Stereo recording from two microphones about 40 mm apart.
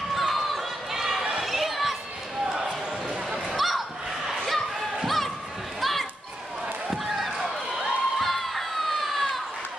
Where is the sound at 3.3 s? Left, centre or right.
Centre.